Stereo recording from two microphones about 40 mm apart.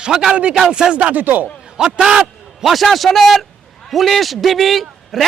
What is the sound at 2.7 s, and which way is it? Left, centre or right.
A man's voice, centre.